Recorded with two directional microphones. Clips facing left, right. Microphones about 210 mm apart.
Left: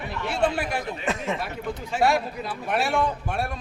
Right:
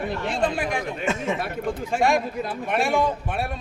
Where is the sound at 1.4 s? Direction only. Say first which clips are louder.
Right 4 dB; 50° right (ahead or behind).